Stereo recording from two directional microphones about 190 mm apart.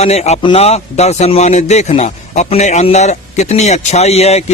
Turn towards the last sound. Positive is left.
turn(degrees=35)  # may be behind; listen again after turning